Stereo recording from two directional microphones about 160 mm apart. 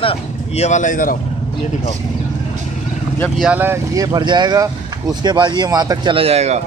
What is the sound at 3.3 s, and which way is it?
Speech, 10° right (ahead or behind).